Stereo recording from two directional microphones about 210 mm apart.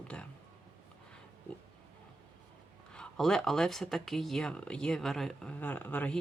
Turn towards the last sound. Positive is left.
turn(degrees=5)  # may be behind; listen again after turning